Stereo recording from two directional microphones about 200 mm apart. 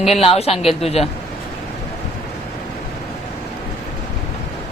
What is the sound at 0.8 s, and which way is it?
Speech, 30° left (ahead or behind).